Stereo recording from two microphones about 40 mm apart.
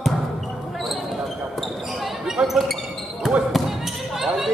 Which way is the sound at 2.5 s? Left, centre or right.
Centre.